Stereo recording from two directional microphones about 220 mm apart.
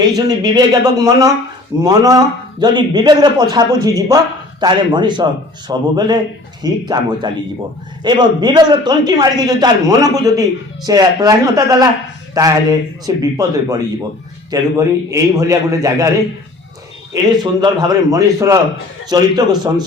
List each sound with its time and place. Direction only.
0.2 s a man's voice: 15° right (ahead or behind)
17.4 s a man's voice: 20° right (ahead or behind)